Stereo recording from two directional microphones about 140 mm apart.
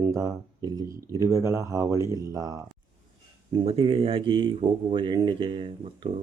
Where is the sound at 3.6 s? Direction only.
40° right (ahead or behind).